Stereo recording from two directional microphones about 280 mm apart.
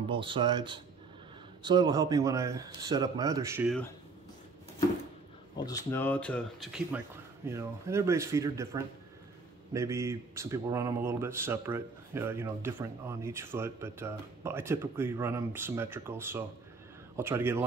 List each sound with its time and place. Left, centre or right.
0.1 s speech: centre
5.6 s speech: centre